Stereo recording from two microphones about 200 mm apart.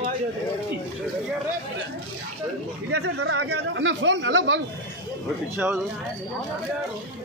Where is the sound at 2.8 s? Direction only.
60° right (ahead or behind).